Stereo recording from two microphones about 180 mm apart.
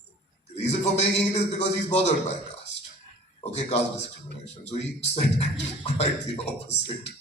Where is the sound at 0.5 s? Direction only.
35° left (ahead or behind).